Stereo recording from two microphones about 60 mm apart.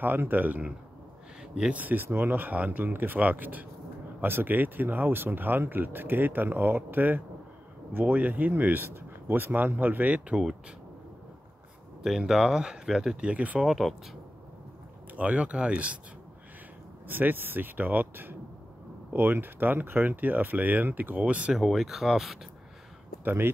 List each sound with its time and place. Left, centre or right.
0.0 s speech: right
12.0 s speech: centre
13.3 s speech: right
13.7 s speech: centre
15.1 s speech: right
17.1 s speech: right
21.5 s speech: centre
23.2 s speech: right